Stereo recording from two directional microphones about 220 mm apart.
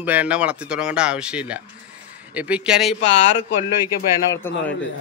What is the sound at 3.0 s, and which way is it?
Speech, 30° left (ahead or behind).